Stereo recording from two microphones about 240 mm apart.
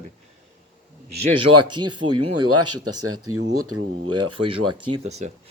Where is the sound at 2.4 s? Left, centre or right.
Right.